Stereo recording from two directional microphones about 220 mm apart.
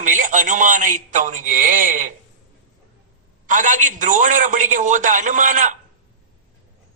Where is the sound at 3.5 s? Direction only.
35° right (ahead or behind).